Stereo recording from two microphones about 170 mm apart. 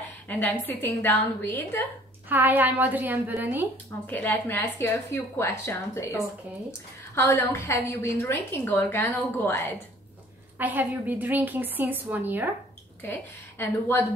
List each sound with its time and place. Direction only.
0.3 s a woman's voice: 10° left (ahead or behind)
2.2 s a woman's voice: 10° right (ahead or behind)
4.1 s a woman's voice: 10° left (ahead or behind)
10.6 s a woman's voice: 10° right (ahead or behind)
13.0 s a woman's voice: 10° left (ahead or behind)